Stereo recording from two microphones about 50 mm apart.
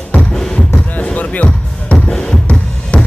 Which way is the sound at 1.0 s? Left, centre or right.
Left.